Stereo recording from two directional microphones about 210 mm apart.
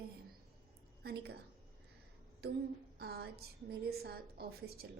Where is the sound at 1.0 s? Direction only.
50° right (ahead or behind).